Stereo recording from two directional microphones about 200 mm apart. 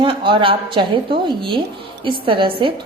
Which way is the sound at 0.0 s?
25° right (ahead or behind).